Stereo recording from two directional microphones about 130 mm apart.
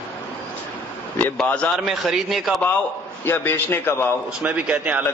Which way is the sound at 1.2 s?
10° left (ahead or behind).